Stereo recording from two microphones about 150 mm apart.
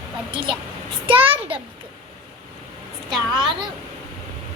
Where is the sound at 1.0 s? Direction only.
40° right (ahead or behind).